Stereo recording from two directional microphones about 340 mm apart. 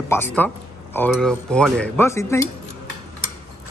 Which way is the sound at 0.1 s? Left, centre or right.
Centre.